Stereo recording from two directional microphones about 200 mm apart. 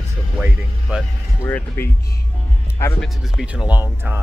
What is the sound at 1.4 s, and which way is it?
Speech, 10° left (ahead or behind).